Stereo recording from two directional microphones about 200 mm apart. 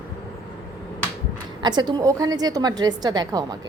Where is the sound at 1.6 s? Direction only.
20° right (ahead or behind).